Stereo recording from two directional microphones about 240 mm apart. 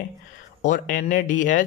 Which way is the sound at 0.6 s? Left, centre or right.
Left.